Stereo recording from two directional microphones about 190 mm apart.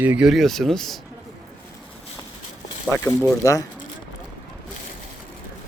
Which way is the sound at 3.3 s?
15° left (ahead or behind).